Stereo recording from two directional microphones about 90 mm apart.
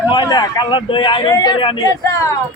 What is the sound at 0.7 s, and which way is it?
Speech, 70° left (ahead or behind).